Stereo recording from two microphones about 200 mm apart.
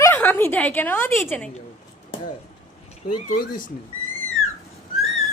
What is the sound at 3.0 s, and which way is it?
Speech, 55° left (ahead or behind).